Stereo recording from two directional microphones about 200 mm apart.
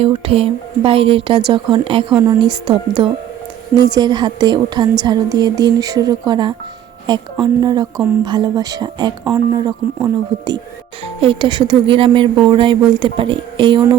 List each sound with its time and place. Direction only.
0.0 s a woman's voice: 30° right (ahead or behind)
3.8 s a woman's voice: 20° right (ahead or behind)